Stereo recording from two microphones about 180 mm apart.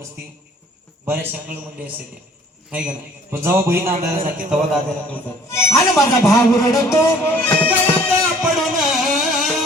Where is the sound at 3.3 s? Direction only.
15° right (ahead or behind).